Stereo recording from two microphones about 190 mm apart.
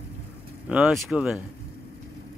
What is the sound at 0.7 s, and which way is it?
Speech, 5° right (ahead or behind).